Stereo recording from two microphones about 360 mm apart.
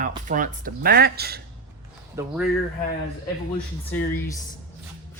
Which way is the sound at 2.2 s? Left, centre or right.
Centre.